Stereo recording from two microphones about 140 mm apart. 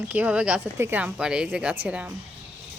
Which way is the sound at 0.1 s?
10° right (ahead or behind).